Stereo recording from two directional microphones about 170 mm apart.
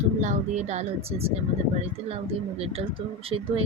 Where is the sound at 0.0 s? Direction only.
45° right (ahead or behind).